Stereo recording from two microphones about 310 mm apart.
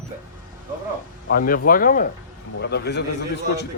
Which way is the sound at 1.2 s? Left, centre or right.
Left.